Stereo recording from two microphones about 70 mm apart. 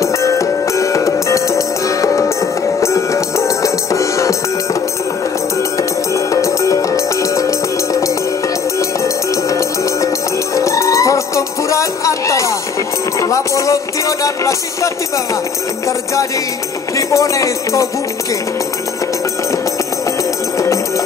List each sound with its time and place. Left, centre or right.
0.0 s music: left
5.8 s music: left
16.9 s speech: left
20.5 s music: left